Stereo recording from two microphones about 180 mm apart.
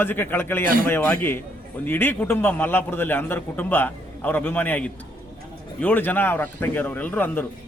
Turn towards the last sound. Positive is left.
turn(degrees=10)  # may be behind; listen again after turning